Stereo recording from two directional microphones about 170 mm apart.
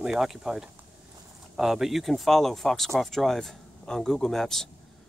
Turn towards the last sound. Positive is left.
turn(degrees=0)  # may be behind; listen again after turning